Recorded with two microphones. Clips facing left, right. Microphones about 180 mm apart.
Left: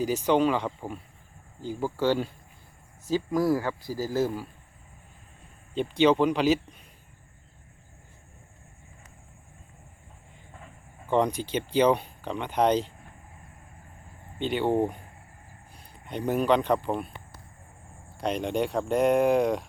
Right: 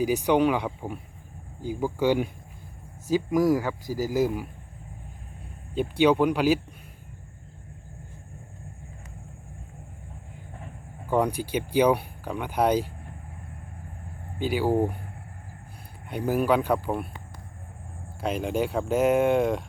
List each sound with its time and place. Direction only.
0.0 s speech: 15° right (ahead or behind)
5.7 s speech: 10° right (ahead or behind)
11.1 s speech: 10° right (ahead or behind)
14.3 s speech: 5° right (ahead or behind)
16.0 s speech: 10° right (ahead or behind)
18.2 s speech: 5° right (ahead or behind)